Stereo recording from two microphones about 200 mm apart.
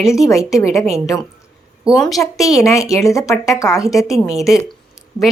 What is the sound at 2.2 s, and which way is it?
Speech, 15° left (ahead or behind).